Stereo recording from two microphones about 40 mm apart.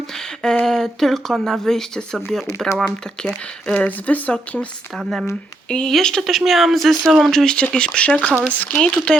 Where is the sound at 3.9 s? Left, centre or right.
Left.